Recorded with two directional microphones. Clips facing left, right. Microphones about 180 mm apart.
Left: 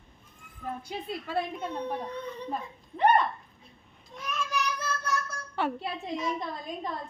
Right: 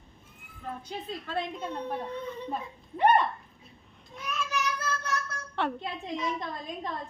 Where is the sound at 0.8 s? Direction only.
10° left (ahead or behind).